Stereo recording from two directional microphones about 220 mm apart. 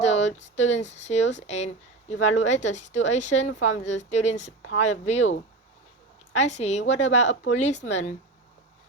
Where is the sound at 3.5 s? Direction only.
60° left (ahead or behind).